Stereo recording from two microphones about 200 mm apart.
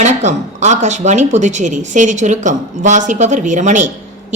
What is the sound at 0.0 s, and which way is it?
A woman's voice, 35° right (ahead or behind).